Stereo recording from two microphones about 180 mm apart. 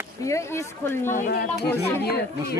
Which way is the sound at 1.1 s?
50° left (ahead or behind).